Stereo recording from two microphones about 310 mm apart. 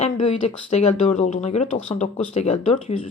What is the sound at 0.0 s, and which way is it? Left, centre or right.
A woman's voice, centre.